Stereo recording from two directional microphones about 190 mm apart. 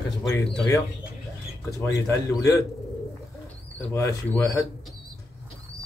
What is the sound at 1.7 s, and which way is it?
Speech, 15° left (ahead or behind).